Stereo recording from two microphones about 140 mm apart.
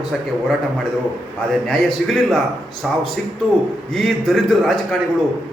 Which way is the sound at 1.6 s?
5° left (ahead or behind).